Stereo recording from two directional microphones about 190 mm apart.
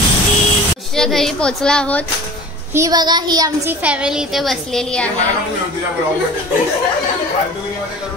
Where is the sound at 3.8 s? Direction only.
5° right (ahead or behind).